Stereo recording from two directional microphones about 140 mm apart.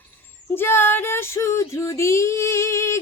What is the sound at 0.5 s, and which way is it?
Female singing, 15° left (ahead or behind).